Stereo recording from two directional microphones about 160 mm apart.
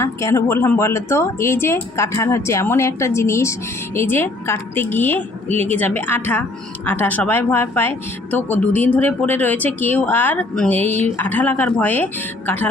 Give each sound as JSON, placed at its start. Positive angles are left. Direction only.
{"t": 0.0, "sound": "speech", "side_deg": 20}